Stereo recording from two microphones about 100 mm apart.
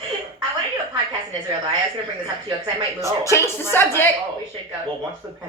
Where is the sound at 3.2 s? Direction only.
30° left (ahead or behind).